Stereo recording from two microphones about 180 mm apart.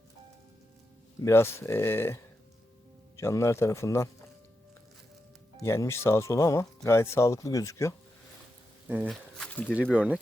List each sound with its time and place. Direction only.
1.2 s speech: 15° left (ahead or behind)
3.2 s speech: 15° left (ahead or behind)
5.6 s speech: 15° left (ahead or behind)
9.0 s speech: 5° left (ahead or behind)